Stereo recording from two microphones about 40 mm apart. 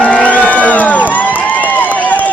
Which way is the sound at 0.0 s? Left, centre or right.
Left.